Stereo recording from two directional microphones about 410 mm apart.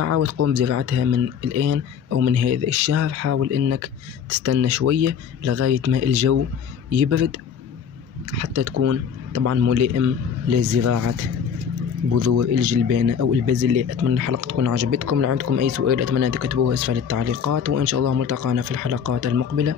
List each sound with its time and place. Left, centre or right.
0.0 s speech: right
8.4 s speech: right